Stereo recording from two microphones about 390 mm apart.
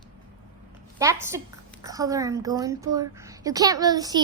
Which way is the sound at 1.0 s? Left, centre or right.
Centre.